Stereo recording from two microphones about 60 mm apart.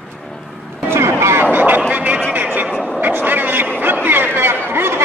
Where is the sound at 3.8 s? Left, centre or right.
Right.